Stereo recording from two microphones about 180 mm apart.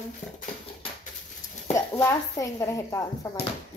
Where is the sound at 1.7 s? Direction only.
15° left (ahead or behind).